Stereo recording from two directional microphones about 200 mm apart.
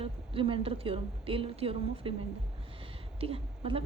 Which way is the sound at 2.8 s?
30° right (ahead or behind).